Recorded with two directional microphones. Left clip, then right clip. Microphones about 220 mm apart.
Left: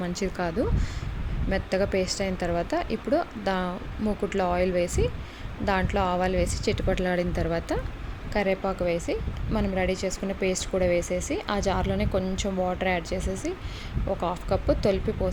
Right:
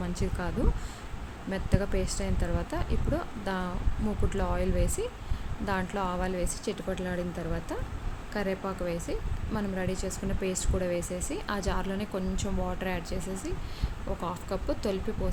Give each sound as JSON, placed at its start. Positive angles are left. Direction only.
{"t": 0.0, "sound": "speech", "side_deg": 15}